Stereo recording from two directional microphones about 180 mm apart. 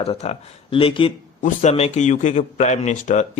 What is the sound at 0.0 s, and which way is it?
Speech, 35° left (ahead or behind).